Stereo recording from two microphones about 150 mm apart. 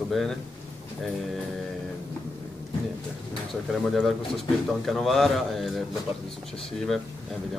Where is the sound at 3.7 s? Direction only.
Centre (ahead or behind).